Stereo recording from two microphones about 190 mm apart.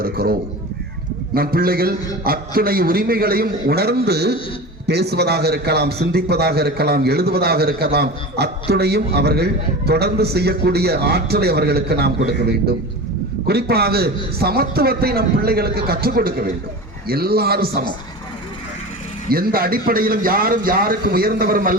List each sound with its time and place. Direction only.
0.0 s a man's voice: 55° right (ahead or behind)
19.3 s a man's voice: 50° right (ahead or behind)